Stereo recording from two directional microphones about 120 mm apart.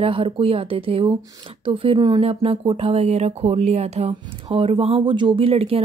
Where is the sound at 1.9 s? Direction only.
35° right (ahead or behind).